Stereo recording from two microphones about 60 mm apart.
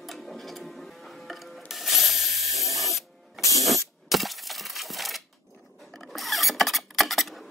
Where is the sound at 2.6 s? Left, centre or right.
Left.